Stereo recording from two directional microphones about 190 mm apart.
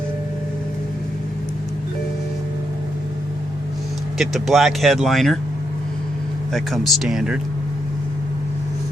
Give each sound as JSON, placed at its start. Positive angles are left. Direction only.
{"t": 4.2, "sound": "speech", "side_deg": 0}
{"t": 6.5, "sound": "speech", "side_deg": 0}